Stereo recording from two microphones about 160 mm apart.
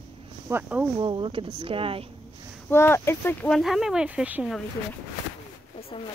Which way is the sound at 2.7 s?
15° left (ahead or behind).